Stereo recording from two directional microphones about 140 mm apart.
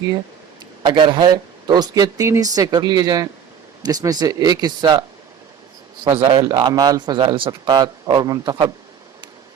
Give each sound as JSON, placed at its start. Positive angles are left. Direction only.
{"t": 0.8, "sound": "speech", "side_deg": -35}
{"t": 6.1, "sound": "a man's voice", "side_deg": -45}
{"t": 6.4, "sound": "speech", "side_deg": -25}